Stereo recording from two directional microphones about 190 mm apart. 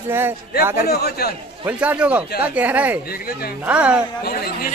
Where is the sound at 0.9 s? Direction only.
55° left (ahead or behind).